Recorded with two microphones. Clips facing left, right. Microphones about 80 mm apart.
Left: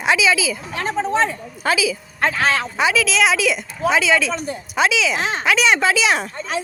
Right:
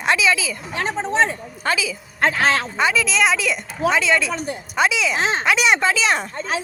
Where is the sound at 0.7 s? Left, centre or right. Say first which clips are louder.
Right 1 dB; right.